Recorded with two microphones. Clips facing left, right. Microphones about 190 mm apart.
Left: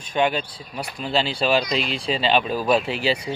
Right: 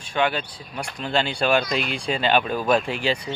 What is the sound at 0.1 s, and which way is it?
Speech, 20° left (ahead or behind).